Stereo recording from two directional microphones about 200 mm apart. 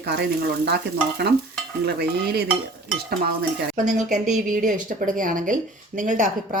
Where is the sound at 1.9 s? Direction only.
55° right (ahead or behind).